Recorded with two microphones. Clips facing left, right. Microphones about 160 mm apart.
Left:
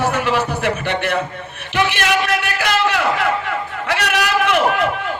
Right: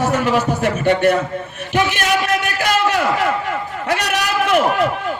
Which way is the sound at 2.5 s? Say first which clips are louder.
Right 1 dB; 45° right (ahead or behind).